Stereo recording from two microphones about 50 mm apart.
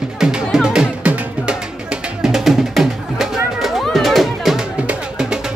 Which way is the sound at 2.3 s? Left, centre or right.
Centre.